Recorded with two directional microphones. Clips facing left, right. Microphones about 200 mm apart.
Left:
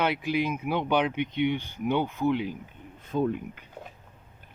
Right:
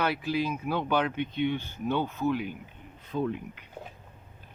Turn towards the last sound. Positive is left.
turn(degrees=50)  # may be behind; listen again after turning